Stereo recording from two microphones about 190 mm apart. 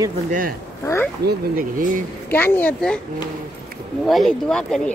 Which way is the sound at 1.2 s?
50° right (ahead or behind).